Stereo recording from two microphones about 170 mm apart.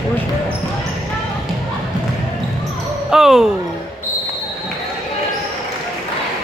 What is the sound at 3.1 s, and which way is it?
Basketball bounce, centre (ahead or behind).